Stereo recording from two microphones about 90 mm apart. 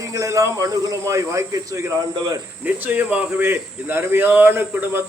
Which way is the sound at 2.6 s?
20° right (ahead or behind).